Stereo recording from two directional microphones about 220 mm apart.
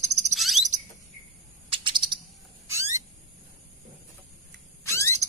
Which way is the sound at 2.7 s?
15° right (ahead or behind).